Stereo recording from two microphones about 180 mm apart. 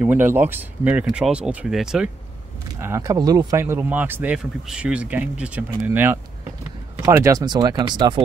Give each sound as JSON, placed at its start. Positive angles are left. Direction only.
{"t": 0.0, "sound": "speech", "side_deg": -10}
{"t": 2.8, "sound": "speech", "side_deg": -15}